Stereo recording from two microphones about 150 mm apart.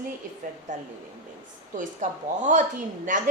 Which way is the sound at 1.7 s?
55° right (ahead or behind).